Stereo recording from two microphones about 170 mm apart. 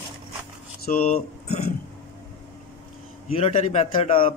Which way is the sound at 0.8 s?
60° left (ahead or behind).